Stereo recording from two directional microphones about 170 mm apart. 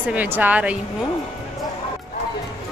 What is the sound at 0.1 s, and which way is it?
Speech, 10° right (ahead or behind).